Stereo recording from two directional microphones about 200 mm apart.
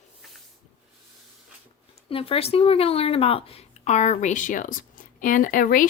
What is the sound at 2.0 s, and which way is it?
A woman's voice, 30° left (ahead or behind).